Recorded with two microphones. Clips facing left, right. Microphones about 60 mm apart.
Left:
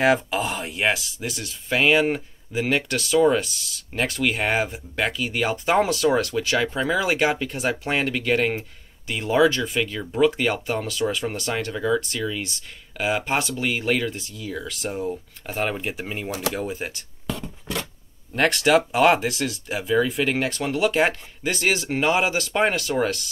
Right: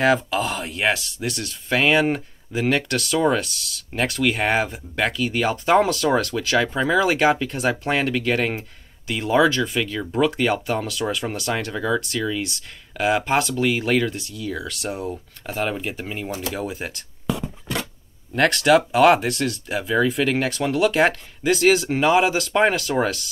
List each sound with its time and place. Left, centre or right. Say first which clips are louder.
0.0 s speech: right 1 dB; centre
16.3 s speech: left 3 dB; left
16.5 s speech: even; centre